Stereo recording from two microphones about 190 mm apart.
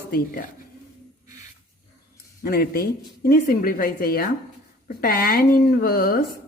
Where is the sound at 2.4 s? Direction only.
50° left (ahead or behind).